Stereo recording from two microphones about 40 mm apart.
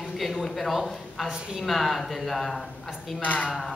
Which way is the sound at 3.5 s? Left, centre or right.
Centre.